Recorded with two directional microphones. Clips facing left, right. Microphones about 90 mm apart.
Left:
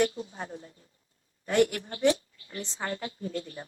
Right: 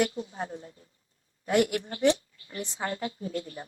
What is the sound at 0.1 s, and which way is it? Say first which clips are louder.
Speech: right 3 dB; 35° right (ahead or behind).